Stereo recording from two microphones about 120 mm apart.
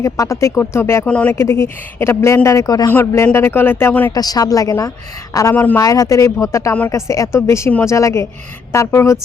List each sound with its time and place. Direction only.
0.0 s speech: 25° left (ahead or behind)
1.0 s speech: 10° left (ahead or behind)
1.3 s speech: 25° left (ahead or behind)
4.1 s a woman's voice: 30° left (ahead or behind)